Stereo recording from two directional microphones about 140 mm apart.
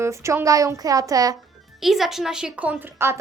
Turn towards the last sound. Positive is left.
turn(degrees=-15)  # may be behind; listen again after turning